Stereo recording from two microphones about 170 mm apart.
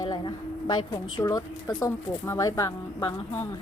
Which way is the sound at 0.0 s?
25° left (ahead or behind).